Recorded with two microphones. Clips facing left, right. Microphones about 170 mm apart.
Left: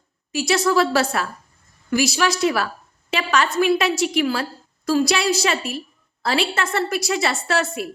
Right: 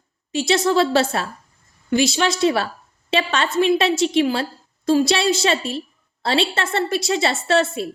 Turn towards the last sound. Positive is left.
turn(degrees=-25)  # may be behind; listen again after turning